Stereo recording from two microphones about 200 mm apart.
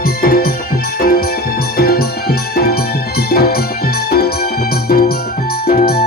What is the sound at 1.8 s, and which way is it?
Music, 50° left (ahead or behind).